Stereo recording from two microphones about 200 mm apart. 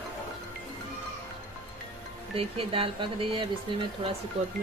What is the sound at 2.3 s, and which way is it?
Speech, 30° right (ahead or behind).